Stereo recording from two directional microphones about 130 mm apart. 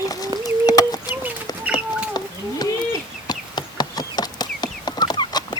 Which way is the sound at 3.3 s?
30° left (ahead or behind).